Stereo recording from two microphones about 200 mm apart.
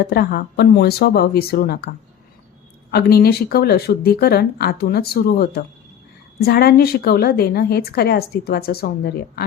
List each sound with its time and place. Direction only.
0.0 s a woman's voice: 50° left (ahead or behind)
2.9 s a woman's voice: 50° left (ahead or behind)